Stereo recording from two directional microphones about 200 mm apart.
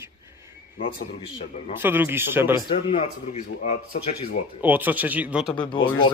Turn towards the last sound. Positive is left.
turn(degrees=25)  # may be behind; listen again after turning